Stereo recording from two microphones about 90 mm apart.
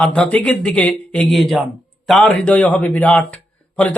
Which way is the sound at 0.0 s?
10° left (ahead or behind).